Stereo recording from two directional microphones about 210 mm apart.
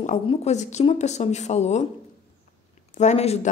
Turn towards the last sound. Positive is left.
turn(degrees=30)  # may be behind; listen again after turning